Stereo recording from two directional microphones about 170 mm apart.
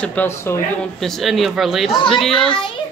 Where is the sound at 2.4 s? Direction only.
30° left (ahead or behind).